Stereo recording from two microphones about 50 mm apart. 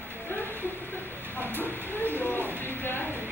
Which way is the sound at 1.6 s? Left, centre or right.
Left.